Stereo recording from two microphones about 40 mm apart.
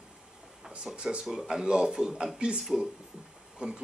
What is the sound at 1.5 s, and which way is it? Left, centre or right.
Speech, right.